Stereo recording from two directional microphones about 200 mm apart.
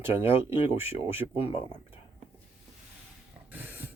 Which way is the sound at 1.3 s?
30° left (ahead or behind).